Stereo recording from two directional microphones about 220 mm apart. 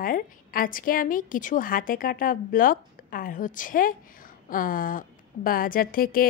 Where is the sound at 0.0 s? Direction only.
40° left (ahead or behind).